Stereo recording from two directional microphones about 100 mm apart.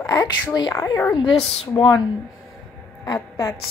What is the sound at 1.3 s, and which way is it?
Speech, 80° left.